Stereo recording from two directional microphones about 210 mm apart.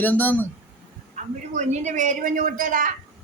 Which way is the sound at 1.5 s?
35° right (ahead or behind).